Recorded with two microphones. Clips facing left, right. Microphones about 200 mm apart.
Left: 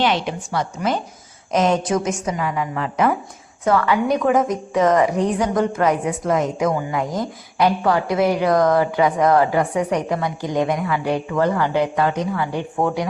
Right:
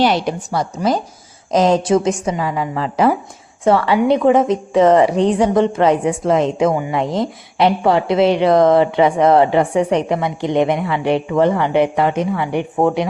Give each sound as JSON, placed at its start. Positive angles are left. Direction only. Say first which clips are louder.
{"t": 0.0, "sound": "a woman's voice", "louder": "right 4 dB", "side_deg": -40}